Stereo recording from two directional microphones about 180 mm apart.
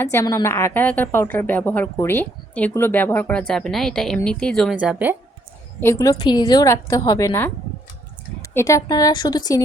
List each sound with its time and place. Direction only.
0.0 s a woman's voice: 15° left (ahead or behind); by 5.1 s 5° right (ahead or behind)
5.8 s a woman's voice: 15° left (ahead or behind)
8.5 s a woman's voice: 15° left (ahead or behind)